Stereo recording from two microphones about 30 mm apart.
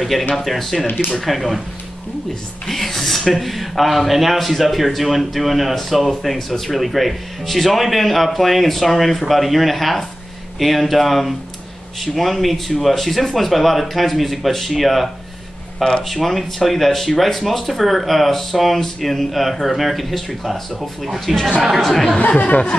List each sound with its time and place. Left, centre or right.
0.0 s speech: centre
2.7 s speech: centre
21.8 s speech: centre
22.4 s speech: left